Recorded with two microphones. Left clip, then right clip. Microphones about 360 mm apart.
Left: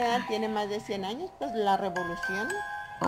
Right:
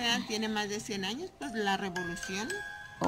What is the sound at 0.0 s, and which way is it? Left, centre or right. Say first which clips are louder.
Speech: left 4 dB; centre.